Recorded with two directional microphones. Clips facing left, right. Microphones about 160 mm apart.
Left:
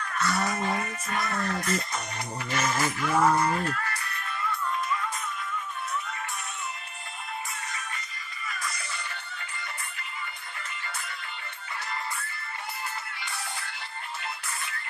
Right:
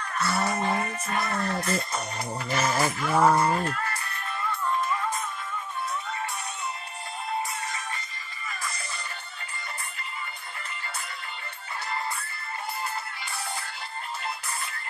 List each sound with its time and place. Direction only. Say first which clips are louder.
0.0 s music: right 1 dB; 30° right (ahead or behind)